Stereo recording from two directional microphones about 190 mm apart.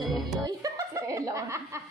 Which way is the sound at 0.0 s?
Centre (ahead or behind).